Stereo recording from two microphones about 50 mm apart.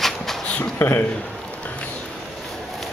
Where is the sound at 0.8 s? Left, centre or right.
Left.